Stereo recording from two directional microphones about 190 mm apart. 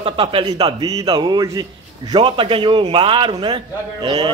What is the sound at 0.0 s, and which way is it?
A man's voice, 30° right (ahead or behind).